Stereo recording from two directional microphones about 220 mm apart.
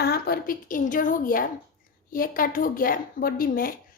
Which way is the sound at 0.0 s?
45° left (ahead or behind).